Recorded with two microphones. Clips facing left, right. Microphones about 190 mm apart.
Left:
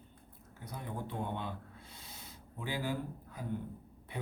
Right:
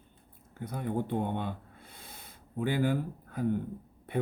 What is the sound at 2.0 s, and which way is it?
Rub, 55° right (ahead or behind).